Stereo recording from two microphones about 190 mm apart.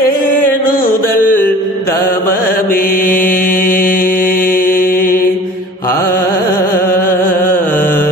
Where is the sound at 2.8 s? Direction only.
50° left (ahead or behind).